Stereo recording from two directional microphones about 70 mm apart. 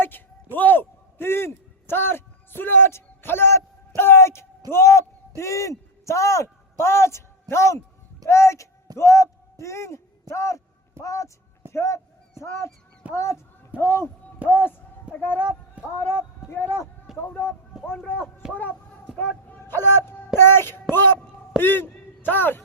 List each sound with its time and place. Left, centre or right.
0.5 s a sound: left
4.7 s a man's voice: left
14.4 s speech: right
15.1 s speech: left
18.4 s speech: centre
19.5 s a man's voice: left